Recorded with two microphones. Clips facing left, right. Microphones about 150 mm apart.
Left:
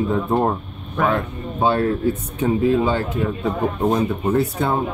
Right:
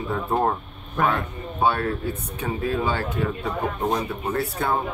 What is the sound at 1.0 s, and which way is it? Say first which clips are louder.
Speech: left 3 dB; centre (ahead or behind).